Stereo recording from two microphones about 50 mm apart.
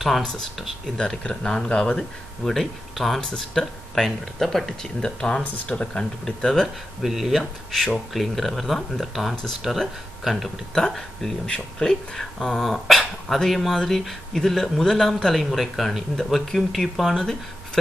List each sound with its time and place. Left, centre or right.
0.9 s speech: centre
2.5 s speech: centre
7.0 s speech: centre
11.0 s speech: centre
12.4 s speech: centre